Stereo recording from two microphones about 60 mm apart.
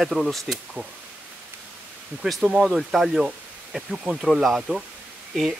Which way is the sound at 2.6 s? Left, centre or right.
Centre.